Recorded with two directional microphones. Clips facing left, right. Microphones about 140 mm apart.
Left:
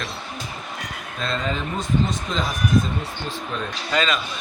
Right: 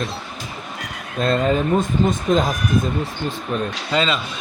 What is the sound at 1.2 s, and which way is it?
Speech, 45° right (ahead or behind).